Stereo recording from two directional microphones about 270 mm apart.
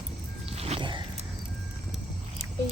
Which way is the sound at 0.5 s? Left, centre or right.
Right.